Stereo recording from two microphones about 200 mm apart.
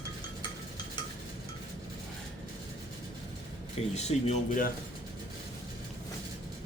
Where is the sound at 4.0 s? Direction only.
35° left (ahead or behind).